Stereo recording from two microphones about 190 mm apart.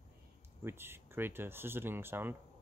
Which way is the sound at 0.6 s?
10° right (ahead or behind).